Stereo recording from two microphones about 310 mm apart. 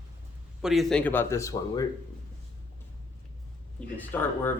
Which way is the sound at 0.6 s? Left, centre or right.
Centre.